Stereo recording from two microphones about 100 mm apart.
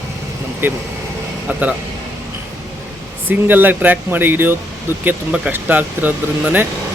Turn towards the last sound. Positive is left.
turn(degrees=-20)  # may be behind; listen again after turning